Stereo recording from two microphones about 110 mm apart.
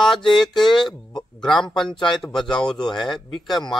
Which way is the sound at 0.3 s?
5° left (ahead or behind).